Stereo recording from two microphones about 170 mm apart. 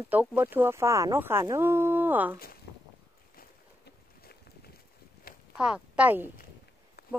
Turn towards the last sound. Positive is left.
turn(degrees=65)  # may be behind; listen again after turning